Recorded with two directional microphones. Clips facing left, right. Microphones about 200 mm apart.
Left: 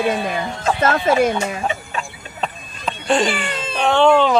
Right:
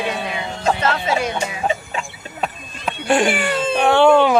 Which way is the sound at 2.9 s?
10° right (ahead or behind).